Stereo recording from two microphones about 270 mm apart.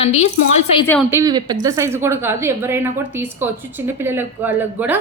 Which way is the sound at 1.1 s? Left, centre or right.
Centre.